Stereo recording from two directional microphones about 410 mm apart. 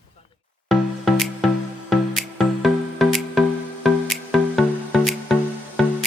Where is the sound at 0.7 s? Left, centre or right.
Centre.